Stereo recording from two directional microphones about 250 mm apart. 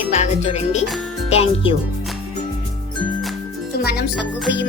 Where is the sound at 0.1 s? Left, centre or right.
Left.